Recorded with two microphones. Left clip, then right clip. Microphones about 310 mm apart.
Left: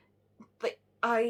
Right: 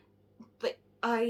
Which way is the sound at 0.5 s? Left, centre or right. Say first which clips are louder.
Left 1 dB; centre.